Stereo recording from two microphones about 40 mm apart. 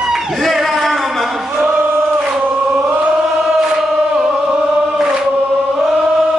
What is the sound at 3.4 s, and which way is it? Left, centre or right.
Chant, centre.